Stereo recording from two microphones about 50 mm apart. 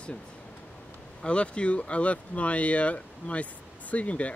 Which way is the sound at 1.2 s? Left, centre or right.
Left.